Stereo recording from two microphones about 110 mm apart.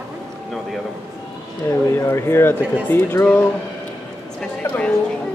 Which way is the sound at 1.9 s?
25° left (ahead or behind).